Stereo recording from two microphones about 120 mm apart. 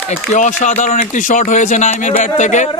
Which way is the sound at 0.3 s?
90° left.